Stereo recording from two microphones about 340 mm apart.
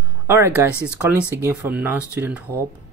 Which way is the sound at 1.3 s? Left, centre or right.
Centre.